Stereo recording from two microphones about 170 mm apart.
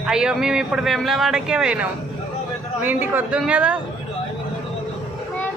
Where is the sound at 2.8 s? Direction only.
10° right (ahead or behind).